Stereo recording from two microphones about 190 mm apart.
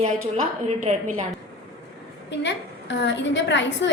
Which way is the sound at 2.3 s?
70° left (ahead or behind).